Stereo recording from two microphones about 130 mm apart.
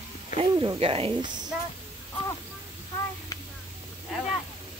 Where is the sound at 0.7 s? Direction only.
45° right (ahead or behind).